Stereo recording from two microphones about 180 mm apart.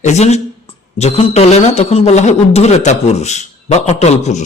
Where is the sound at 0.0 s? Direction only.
40° left (ahead or behind).